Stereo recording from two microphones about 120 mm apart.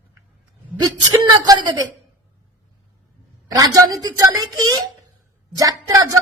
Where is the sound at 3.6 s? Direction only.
30° right (ahead or behind).